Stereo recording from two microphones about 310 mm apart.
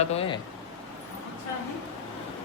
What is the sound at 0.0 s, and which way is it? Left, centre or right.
Speech, centre.